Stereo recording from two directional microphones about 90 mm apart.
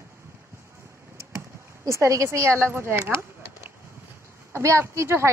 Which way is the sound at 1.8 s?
35° right (ahead or behind).